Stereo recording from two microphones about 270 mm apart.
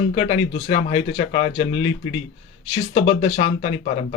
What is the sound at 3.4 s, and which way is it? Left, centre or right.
Speech, left.